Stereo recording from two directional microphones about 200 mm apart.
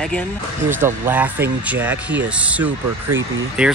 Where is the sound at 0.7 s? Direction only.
10° right (ahead or behind).